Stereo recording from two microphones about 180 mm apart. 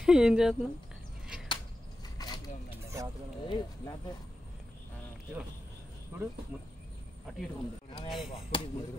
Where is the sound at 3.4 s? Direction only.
25° left (ahead or behind).